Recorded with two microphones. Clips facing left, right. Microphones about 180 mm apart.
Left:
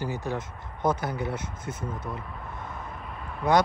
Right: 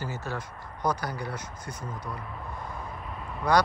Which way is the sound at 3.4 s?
20° left (ahead or behind).